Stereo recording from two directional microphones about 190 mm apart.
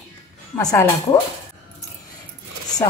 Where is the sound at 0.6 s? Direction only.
20° left (ahead or behind).